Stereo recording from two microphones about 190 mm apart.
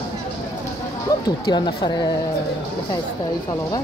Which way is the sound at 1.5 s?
25° left (ahead or behind).